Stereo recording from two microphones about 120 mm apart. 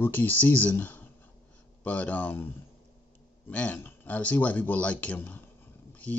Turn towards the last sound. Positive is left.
turn(degrees=15)  # may be behind; listen again after turning